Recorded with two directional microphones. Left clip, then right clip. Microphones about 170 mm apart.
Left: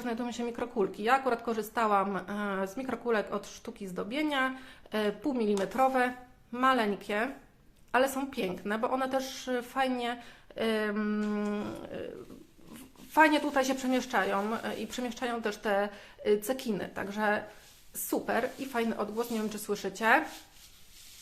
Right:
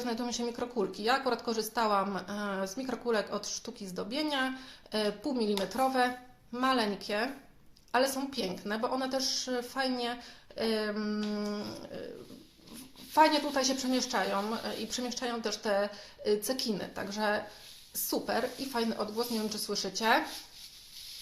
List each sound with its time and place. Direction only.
0.0 s speech: 10° left (ahead or behind)
0.3 s speech: 20° left (ahead or behind)
13.1 s speech: 20° left (ahead or behind)